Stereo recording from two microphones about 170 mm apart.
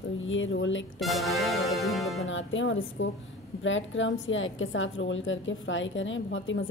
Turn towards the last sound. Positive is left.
turn(degrees=90)